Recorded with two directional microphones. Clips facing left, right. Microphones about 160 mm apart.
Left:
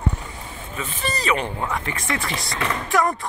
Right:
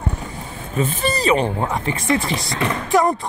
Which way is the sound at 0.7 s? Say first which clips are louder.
Right 8 dB; 35° right (ahead or behind).